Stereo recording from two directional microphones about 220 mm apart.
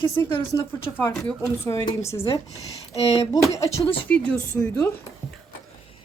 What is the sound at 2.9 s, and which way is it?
Speech, 30° left (ahead or behind).